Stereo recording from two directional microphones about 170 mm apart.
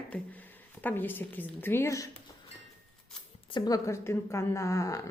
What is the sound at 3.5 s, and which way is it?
A woman's voice, 25° left (ahead or behind).